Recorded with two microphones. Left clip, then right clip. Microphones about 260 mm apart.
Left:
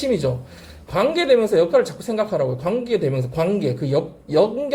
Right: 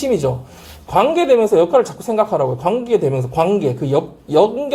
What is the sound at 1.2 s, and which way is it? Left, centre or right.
A woman's voice, right.